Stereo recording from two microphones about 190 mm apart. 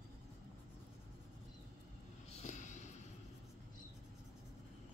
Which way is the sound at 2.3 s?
35° left (ahead or behind).